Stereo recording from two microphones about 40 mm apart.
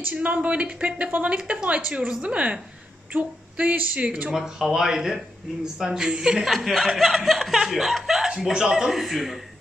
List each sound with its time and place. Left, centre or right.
0.2 s speech: right
3.1 s a sound: right
4.4 s speech: centre
6.4 s speech: centre